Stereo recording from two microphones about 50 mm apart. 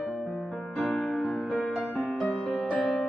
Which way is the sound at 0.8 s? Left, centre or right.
Left.